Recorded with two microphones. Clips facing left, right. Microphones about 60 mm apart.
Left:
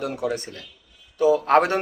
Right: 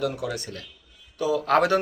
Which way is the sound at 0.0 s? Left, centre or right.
Left.